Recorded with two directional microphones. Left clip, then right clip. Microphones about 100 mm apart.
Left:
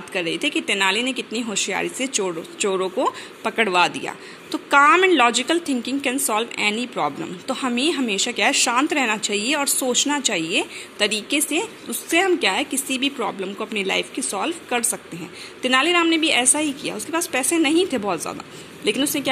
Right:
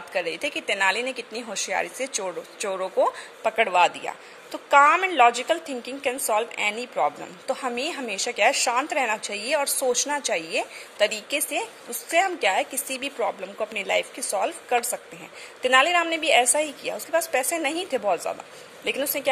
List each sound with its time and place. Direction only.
0.1 s a woman's voice: 45° right (ahead or behind)
3.5 s a woman's voice: 35° right (ahead or behind)